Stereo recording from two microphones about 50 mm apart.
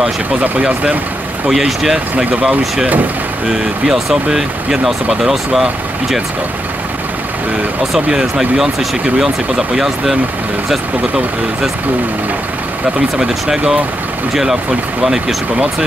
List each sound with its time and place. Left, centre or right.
0.4 s speech: right
1.5 s speech: centre
8.1 s speech: centre
13.2 s speech: centre